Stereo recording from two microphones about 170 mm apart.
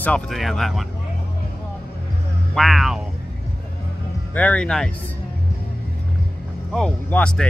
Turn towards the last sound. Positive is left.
turn(degrees=5)  # may be behind; listen again after turning